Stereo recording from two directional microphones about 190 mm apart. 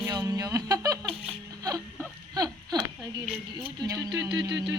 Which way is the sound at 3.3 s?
10° right (ahead or behind).